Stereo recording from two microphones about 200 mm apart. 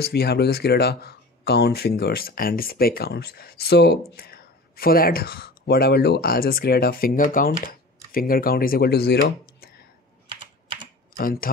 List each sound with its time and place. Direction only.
0.0 s speech: 50° left (ahead or behind)
10.2 s typing: 25° right (ahead or behind)
11.1 s speech: 45° left (ahead or behind)